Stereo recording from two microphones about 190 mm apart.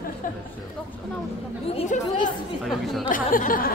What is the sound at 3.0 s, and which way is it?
Speech, 45° left (ahead or behind).